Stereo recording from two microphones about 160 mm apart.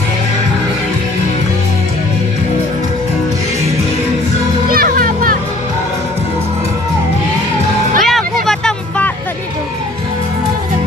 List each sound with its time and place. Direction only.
4.6 s music: 65° right (ahead or behind)
8.0 s vehicle: centre (ahead or behind)
8.5 s music: 5° left (ahead or behind)